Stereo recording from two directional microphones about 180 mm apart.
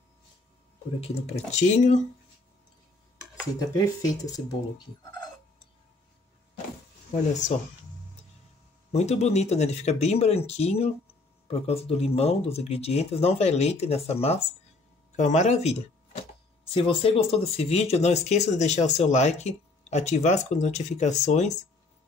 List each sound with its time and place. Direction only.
1.0 s speech: 40° left (ahead or behind)
3.5 s speech: 20° left (ahead or behind)
8.9 s speech: 35° left (ahead or behind)